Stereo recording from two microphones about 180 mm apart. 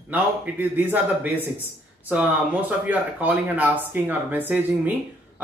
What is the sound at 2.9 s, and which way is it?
Speech, 10° right (ahead or behind).